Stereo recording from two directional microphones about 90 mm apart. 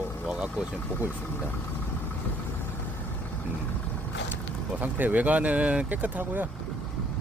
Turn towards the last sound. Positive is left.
turn(degrees=-20)  # may be behind; listen again after turning